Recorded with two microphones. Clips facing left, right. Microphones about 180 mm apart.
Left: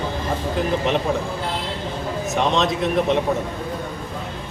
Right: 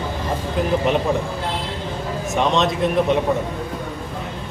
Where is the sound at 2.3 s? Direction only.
Centre (ahead or behind).